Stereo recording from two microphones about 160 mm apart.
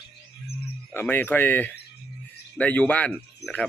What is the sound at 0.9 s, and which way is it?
A man's voice, 15° left (ahead or behind).